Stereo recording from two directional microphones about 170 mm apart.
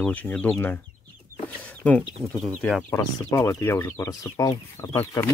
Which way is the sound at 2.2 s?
Centre (ahead or behind).